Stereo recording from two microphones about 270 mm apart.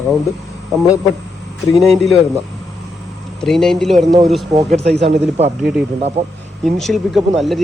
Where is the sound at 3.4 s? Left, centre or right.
Centre.